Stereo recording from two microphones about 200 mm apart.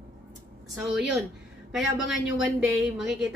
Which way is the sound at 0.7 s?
Centre (ahead or behind).